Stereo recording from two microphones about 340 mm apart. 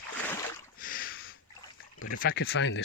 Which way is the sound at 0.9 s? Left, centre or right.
Left.